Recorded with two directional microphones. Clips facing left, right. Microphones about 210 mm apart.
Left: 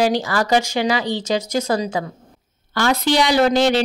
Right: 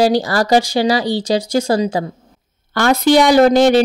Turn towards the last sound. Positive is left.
turn(degrees=-45)  # may be behind; listen again after turning